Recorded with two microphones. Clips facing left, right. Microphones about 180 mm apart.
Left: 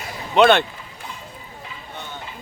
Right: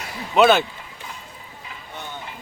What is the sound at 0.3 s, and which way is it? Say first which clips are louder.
Speech: left 1 dB; 5° right (ahead or behind).